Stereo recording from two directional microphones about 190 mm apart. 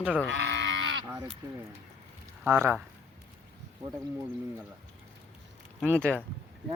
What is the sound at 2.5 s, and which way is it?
Speech, 10° right (ahead or behind).